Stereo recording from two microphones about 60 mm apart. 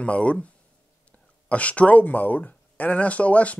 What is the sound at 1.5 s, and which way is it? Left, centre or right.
Speech, left.